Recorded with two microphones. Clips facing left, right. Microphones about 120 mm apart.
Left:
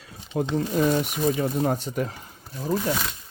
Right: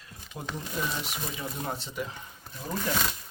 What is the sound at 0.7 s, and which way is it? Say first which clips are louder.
Speech: left 11 dB; 50° left (ahead or behind).